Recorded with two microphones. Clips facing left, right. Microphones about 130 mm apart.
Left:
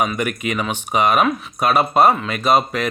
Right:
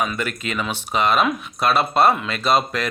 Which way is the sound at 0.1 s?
15° left (ahead or behind).